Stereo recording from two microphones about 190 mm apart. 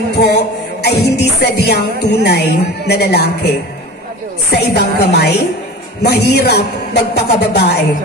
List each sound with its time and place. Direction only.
0.1 s music: 60° left (ahead or behind)